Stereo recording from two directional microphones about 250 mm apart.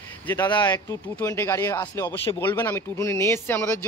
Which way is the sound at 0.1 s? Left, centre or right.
Centre.